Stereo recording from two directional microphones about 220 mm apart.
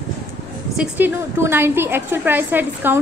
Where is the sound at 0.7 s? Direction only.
10° right (ahead or behind).